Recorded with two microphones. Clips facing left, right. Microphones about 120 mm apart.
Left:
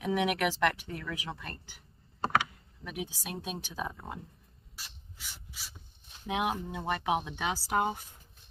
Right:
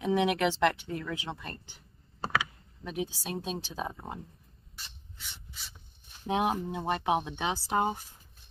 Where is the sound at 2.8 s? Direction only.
30° right (ahead or behind).